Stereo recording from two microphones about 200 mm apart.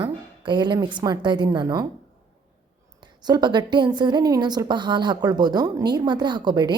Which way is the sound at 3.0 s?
20° right (ahead or behind).